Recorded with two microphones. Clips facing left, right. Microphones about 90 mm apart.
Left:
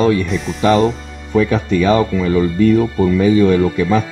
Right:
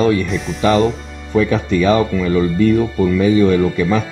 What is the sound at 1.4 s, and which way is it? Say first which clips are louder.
Speech: even; 15° left (ahead or behind).